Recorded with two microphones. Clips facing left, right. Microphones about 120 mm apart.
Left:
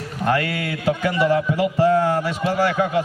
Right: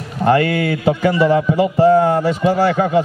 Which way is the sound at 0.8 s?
25° right (ahead or behind).